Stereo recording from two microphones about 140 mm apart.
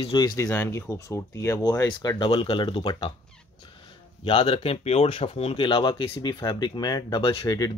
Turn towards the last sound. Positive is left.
turn(degrees=25)  # may be behind; listen again after turning